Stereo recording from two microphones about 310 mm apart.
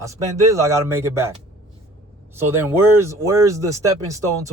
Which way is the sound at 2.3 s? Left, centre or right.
Centre.